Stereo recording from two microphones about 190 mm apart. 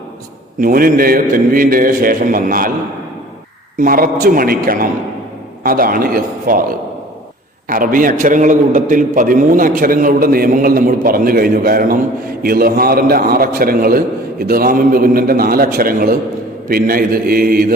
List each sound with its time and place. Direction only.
0.6 s a man's voice: 50° right (ahead or behind)
3.8 s a man's voice: 45° right (ahead or behind)